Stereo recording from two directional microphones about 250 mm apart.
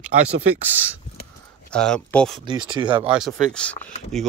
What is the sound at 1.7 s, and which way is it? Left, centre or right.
Speech, centre.